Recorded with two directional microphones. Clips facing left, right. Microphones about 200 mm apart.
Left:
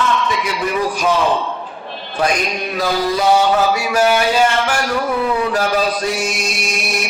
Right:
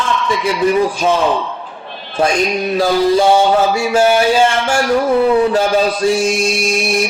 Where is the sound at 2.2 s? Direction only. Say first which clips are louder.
Right 4 dB; 25° right (ahead or behind).